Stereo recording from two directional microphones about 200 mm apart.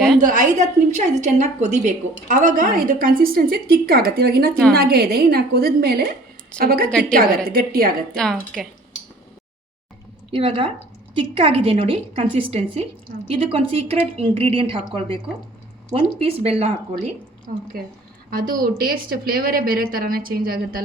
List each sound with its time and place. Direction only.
0.2 s a woman's voice: 40° right (ahead or behind)
8.1 s speech: centre (ahead or behind)
10.3 s a woman's voice: 30° right (ahead or behind)
18.3 s speech: 45° right (ahead or behind)